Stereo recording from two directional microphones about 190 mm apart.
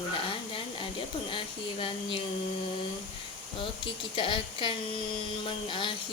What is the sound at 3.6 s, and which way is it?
Speech, 30° left (ahead or behind).